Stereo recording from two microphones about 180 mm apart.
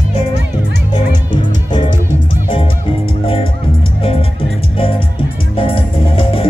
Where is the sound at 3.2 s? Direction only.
30° left (ahead or behind).